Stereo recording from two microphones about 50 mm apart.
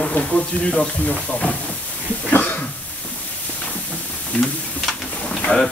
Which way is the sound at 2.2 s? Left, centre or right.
Left.